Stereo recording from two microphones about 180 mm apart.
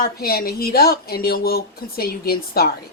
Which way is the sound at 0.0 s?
55° left (ahead or behind).